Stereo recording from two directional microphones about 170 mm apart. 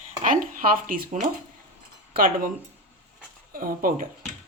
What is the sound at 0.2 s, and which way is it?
Speech, 50° right (ahead or behind).